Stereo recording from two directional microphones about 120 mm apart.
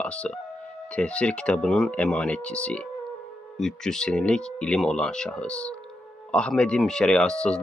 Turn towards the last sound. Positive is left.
turn(degrees=5)  # may be behind; listen again after turning